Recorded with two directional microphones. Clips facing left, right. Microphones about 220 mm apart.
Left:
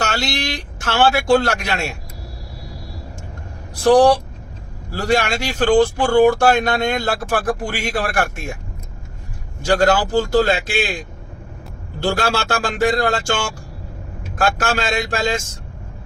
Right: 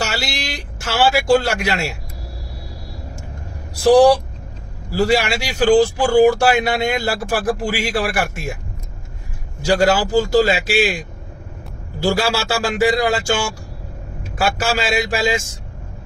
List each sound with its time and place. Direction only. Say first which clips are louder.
0.1 s a man's voice: left 3 dB; 10° right (ahead or behind)
3.8 s speech: right 1 dB; 10° right (ahead or behind)
9.6 s speech: even; 10° right (ahead or behind)
12.0 s speech: right 1 dB; 10° right (ahead or behind)
14.3 s speech: even; 5° right (ahead or behind)